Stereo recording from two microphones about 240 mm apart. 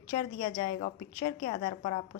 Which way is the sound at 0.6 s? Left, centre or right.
Left.